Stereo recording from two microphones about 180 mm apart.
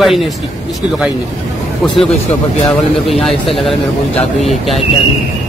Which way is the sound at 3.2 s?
Centre (ahead or behind).